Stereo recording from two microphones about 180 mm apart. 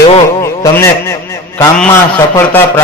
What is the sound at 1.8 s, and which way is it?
A man's voice, 10° left (ahead or behind).